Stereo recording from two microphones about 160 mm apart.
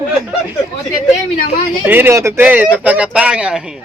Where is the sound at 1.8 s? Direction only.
15° right (ahead or behind).